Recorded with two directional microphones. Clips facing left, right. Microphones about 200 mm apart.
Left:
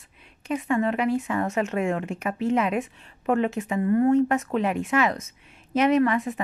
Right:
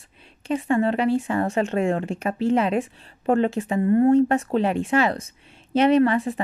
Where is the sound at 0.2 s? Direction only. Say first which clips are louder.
Right 3 dB; 30° right (ahead or behind).